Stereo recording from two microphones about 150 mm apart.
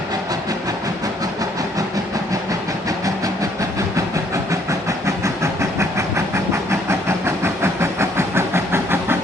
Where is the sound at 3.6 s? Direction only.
20° right (ahead or behind).